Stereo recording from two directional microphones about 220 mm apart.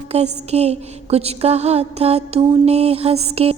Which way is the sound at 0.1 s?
30° right (ahead or behind).